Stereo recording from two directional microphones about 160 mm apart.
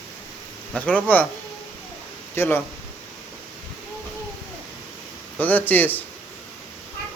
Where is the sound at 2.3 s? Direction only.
15° left (ahead or behind).